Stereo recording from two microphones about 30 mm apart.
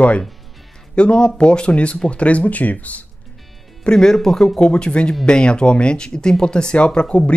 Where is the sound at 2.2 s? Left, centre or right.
Left.